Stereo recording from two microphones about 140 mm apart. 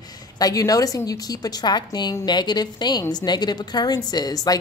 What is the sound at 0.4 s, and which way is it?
A woman's voice, 25° left (ahead or behind).